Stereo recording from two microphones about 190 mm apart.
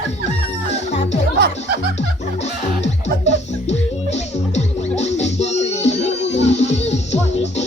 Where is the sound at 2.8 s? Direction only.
35° left (ahead or behind).